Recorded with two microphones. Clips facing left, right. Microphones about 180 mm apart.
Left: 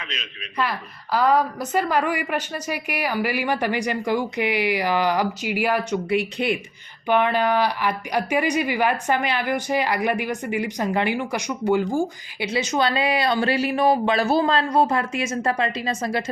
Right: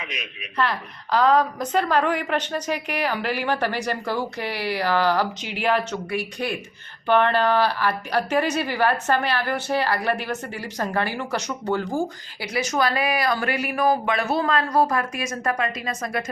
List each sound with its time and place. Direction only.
0.0 s a man's voice: 10° right (ahead or behind)
0.5 s a woman's voice: 10° left (ahead or behind)
6.1 s a woman's voice: 20° left (ahead or behind)